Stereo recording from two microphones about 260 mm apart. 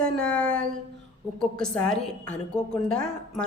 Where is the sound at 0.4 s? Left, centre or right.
Right.